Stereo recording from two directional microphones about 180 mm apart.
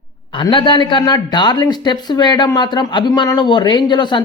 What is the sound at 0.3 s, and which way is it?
Speech, 25° left (ahead or behind).